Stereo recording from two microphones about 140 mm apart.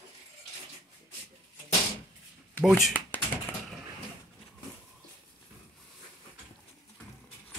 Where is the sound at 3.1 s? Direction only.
15° left (ahead or behind).